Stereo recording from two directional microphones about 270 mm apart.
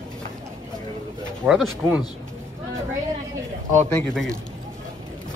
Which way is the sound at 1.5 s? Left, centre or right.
Centre.